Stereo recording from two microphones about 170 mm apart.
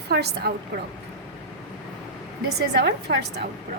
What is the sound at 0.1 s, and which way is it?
Speech, 70° right (ahead or behind).